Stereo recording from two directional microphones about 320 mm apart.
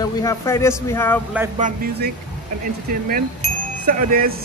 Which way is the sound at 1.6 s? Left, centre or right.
Right.